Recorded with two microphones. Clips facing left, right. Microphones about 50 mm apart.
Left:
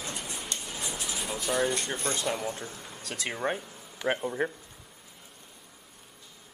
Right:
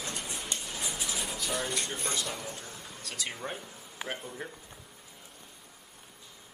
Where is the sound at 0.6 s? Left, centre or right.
Centre.